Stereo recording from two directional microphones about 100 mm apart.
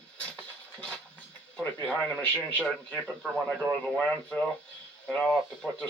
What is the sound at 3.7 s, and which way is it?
Speech, 15° left (ahead or behind).